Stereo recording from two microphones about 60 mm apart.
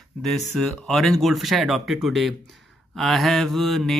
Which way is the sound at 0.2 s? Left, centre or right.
Centre.